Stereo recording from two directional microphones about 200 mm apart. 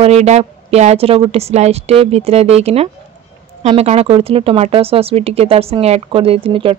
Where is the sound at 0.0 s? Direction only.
30° right (ahead or behind).